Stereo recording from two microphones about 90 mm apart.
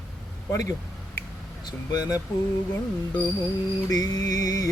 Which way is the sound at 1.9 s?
45° left (ahead or behind).